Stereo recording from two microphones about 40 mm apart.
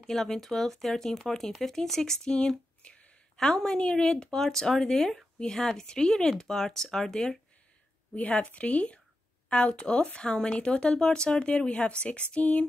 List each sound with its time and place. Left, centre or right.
0.0 s speech: centre
2.8 s a sound: left
3.4 s speech: centre
8.1 s a woman's voice: left